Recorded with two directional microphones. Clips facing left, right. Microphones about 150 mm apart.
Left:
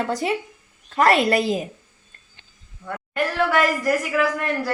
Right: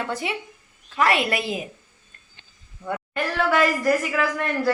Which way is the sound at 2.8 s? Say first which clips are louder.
Right 3 dB; 25° right (ahead or behind).